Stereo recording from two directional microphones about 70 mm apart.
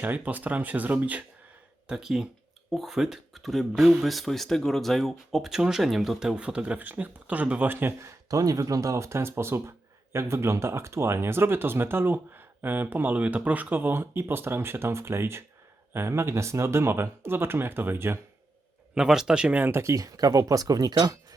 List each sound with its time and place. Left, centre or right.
0.0 s speech: right
1.9 s speech: centre; by 7.9 s right
8.3 s speech: right
18.9 s speech: centre
19.5 s speech: right
19.8 s speech: right